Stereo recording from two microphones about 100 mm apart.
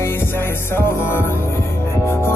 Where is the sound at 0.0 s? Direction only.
25° left (ahead or behind).